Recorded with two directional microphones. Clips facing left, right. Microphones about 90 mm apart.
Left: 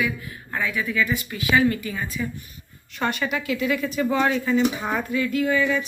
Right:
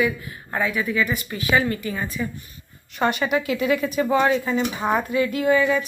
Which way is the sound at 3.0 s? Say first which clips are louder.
Right 4 dB; 20° right (ahead or behind).